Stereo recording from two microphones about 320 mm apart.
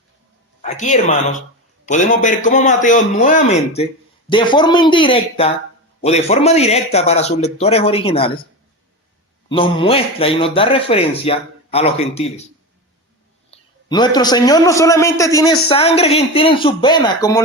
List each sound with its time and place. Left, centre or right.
0.6 s a man's voice: left
9.5 s a man's voice: centre
13.5 s a man's voice: centre